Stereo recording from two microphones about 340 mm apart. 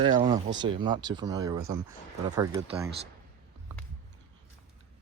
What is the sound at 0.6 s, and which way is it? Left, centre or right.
Speech, centre.